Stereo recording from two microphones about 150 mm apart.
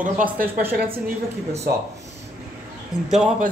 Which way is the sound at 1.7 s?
90° right.